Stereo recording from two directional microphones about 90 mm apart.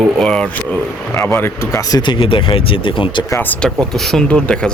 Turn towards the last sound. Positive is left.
turn(degrees=10)  # may be behind; listen again after turning